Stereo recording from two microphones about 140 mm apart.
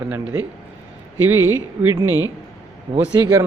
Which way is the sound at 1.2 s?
15° right (ahead or behind).